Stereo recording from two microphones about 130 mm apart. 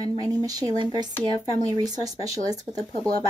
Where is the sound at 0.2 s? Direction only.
30° right (ahead or behind).